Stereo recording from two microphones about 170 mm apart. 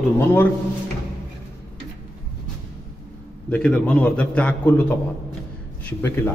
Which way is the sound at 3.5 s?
5° left (ahead or behind).